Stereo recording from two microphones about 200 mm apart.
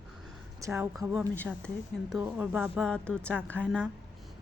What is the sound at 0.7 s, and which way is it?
Speech, 5° right (ahead or behind).